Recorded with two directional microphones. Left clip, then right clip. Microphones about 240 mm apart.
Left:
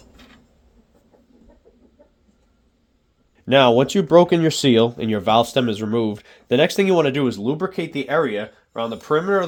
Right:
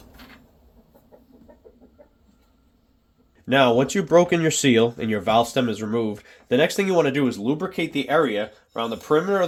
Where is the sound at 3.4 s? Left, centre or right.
Left.